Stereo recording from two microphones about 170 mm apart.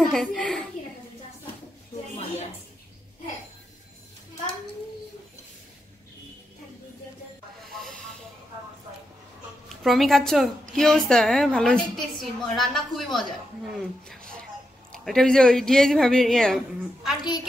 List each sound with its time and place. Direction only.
0.0 s a woman's voice: centre (ahead or behind)
7.7 s hiss: centre (ahead or behind)
9.8 s a woman's voice: centre (ahead or behind)